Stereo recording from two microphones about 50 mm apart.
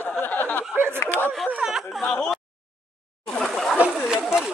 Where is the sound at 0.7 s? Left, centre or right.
Right.